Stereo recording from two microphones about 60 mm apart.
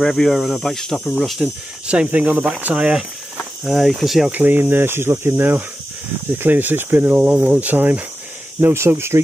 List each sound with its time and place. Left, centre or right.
0.0 s speech: centre
1.0 s speech: centre
1.4 s speech: centre
2.0 s speech: right
3.6 s speech: centre
4.3 s speech: right
8.5 s speech: right